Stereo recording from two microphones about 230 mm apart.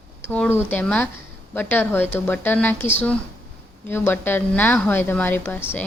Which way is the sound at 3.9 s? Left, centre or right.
Centre.